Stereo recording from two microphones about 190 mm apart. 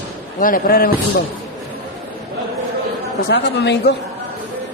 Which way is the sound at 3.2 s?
60° left (ahead or behind).